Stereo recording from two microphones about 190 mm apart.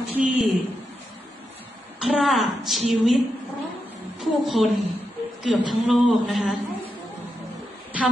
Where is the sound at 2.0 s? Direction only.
Centre (ahead or behind).